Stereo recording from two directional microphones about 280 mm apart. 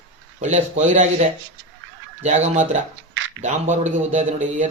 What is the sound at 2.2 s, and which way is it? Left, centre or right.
A man's voice, right.